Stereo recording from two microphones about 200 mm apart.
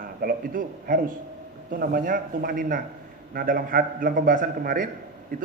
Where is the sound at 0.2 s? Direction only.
45° right (ahead or behind).